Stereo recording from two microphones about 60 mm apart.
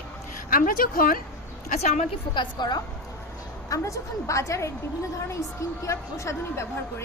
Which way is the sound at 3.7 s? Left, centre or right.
Left.